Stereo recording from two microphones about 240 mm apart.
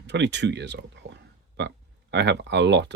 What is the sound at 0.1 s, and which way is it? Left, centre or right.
Speech, right.